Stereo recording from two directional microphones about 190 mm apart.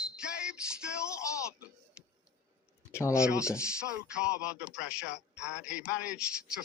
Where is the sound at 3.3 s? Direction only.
15° left (ahead or behind).